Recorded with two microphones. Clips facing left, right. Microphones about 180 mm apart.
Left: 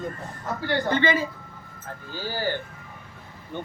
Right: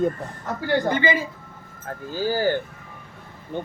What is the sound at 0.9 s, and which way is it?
Speech, 10° right (ahead or behind).